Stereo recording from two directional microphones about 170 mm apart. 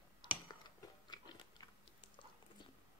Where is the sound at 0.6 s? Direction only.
25° left (ahead or behind).